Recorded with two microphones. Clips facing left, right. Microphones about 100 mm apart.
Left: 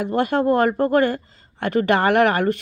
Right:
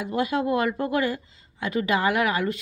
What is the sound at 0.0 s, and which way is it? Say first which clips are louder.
Speech: left 5 dB; 60° left (ahead or behind).